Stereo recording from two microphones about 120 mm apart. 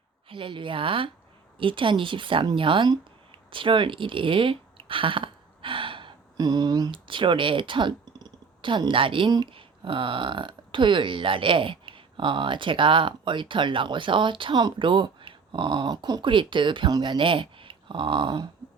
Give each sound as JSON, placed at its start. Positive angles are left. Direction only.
{"t": 0.3, "sound": "a woman's voice", "side_deg": -45}